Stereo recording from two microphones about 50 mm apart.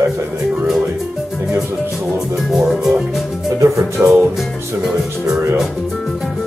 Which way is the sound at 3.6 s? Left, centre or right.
Right.